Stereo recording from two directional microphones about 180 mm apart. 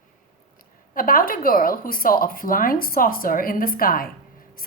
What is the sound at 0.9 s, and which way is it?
A woman's voice, 50° left (ahead or behind).